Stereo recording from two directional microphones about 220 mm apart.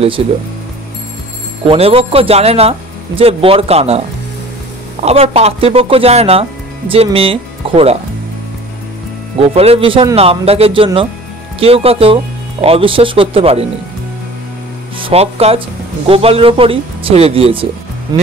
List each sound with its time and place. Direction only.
0.2 s a man's voice: 25° right (ahead or behind)
1.7 s a man's voice: 25° right (ahead or behind)
5.0 s a man's voice: 30° right (ahead or behind)
9.4 s a man's voice: 25° right (ahead or behind)
15.0 s a man's voice: 25° right (ahead or behind)